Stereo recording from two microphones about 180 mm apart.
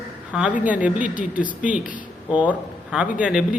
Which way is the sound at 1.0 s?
45° left (ahead or behind).